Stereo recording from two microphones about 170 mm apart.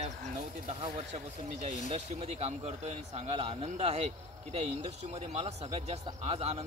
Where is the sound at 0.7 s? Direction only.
35° right (ahead or behind).